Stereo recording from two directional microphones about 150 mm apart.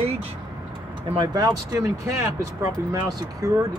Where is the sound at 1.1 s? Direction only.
30° right (ahead or behind).